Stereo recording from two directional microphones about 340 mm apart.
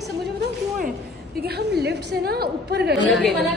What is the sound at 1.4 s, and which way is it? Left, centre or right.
A woman's voice, right.